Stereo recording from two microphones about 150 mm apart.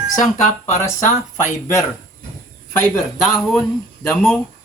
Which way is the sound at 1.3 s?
20° left (ahead or behind).